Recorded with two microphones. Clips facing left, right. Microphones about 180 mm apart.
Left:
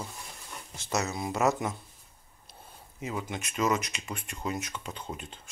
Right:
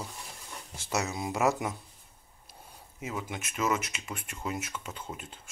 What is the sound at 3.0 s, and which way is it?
Speech, 5° right (ahead or behind).